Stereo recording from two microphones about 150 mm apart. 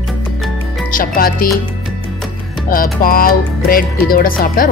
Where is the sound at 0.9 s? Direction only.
70° left (ahead or behind).